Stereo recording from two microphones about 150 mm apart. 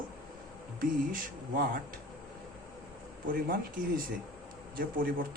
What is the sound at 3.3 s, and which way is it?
Speech, 70° right (ahead or behind).